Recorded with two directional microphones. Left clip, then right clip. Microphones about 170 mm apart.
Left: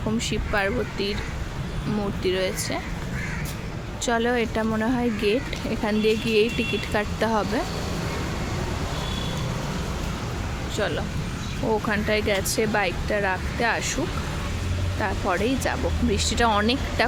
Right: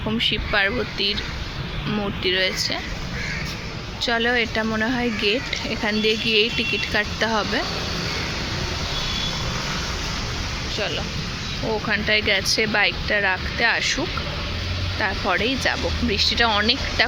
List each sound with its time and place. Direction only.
0.2 s speech: centre (ahead or behind)
2.2 s speech: 5° left (ahead or behind)
4.0 s speech: 15° left (ahead or behind)
7.3 s speech: 5° right (ahead or behind)
11.9 s speech: 10° left (ahead or behind)
15.0 s speech: 5° left (ahead or behind)